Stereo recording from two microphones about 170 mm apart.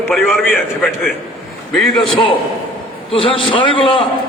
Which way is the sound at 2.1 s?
30° left (ahead or behind).